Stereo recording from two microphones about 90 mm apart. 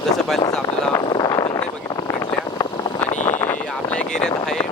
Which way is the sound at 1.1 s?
45° left (ahead or behind).